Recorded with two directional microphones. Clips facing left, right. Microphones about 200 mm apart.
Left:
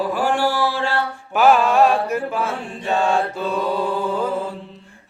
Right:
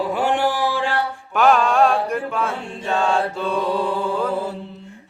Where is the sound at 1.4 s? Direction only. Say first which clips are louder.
Left 1 dB; 5° left (ahead or behind).